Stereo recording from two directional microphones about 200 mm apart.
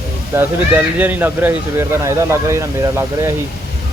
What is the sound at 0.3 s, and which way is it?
Speech, 10° right (ahead or behind).